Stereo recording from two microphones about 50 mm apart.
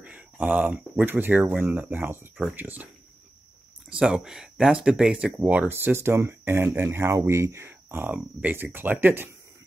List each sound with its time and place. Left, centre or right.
0.0 s a sound: right
0.9 s speech: right
4.1 s speech: centre
5.1 s speech: right
5.7 s speech: right
6.9 s speech: right
7.6 s a sound: right
8.1 s speech: right